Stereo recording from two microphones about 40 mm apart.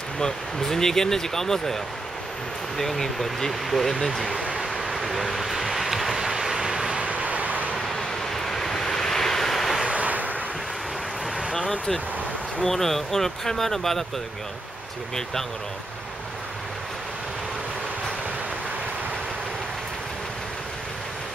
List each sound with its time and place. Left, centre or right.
0.2 s speech: centre
2.8 s speech: centre
4.7 s vehicle: centre
7.0 s vehicle: right
8.3 s vehicle: centre
9.8 s waves: right
12.6 s speech: centre